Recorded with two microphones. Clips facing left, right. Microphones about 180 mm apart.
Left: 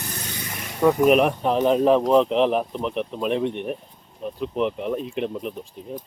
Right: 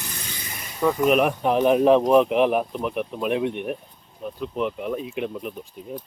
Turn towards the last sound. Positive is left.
turn(degrees=-5)  # may be behind; listen again after turning